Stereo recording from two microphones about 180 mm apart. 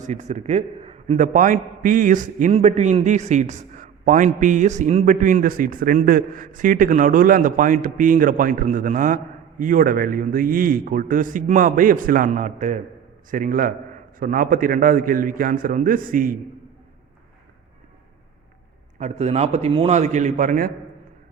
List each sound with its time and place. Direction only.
0.0 s a man's voice: 40° right (ahead or behind)
18.9 s a man's voice: 40° right (ahead or behind)